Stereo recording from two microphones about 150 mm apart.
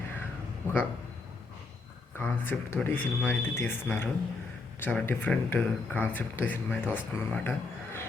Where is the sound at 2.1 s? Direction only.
15° left (ahead or behind).